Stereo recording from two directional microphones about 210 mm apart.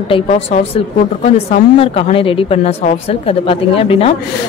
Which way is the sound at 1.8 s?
25° left (ahead or behind).